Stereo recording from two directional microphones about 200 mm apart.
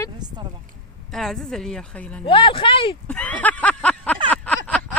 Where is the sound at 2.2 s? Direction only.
25° left (ahead or behind).